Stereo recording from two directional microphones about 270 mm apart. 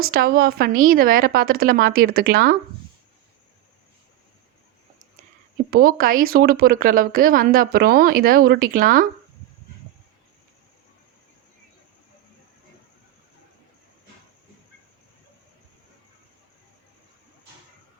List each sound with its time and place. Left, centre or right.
0.0 s speech: right
5.7 s speech: right